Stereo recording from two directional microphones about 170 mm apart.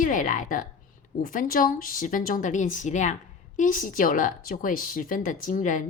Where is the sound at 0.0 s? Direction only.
50° left (ahead or behind).